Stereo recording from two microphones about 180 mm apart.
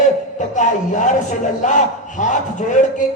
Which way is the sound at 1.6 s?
45° left (ahead or behind).